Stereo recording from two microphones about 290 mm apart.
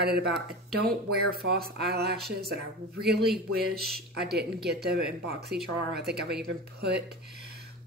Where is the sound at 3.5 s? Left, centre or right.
Right.